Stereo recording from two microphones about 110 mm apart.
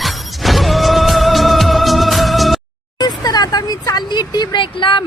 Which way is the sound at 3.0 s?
35° left (ahead or behind).